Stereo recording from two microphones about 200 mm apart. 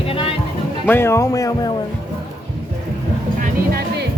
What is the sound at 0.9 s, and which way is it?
Speech, 10° left (ahead or behind).